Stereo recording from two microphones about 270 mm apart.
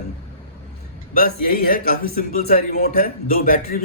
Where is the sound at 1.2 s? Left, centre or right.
Left.